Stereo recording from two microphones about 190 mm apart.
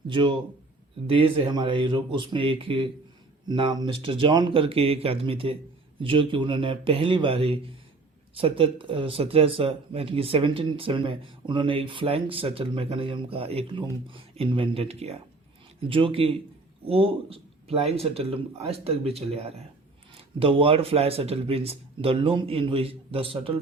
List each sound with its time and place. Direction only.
0.1 s speech: 25° right (ahead or behind)